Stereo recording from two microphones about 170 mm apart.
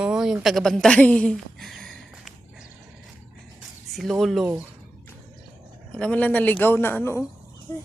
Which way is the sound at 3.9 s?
Centre (ahead or behind).